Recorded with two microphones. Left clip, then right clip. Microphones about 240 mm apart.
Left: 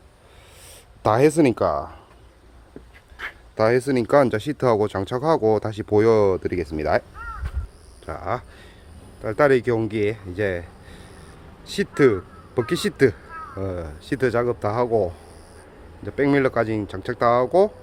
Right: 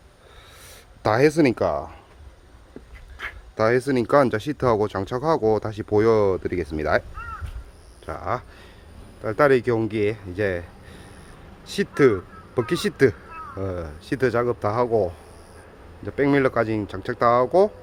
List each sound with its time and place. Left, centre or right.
0.7 s speech: centre
3.2 s a sound: centre
3.5 s speech: centre
8.0 s speech: centre